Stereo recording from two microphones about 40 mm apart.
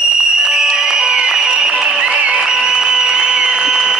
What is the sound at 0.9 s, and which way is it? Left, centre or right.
Music, centre.